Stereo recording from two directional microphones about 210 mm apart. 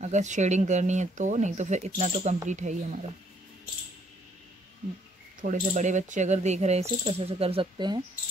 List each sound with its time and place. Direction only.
0.0 s speech: 35° right (ahead or behind)
5.4 s speech: 35° right (ahead or behind)